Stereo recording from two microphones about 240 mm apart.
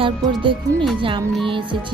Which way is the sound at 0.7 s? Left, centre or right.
Centre.